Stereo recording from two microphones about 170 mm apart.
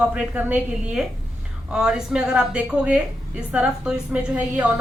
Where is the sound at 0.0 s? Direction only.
10° right (ahead or behind).